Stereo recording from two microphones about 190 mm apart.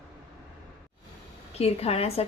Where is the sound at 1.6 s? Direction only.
30° left (ahead or behind).